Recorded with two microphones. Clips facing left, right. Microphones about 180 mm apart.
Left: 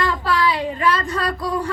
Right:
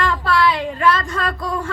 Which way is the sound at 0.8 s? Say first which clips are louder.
Right 3 dB; 40° left (ahead or behind).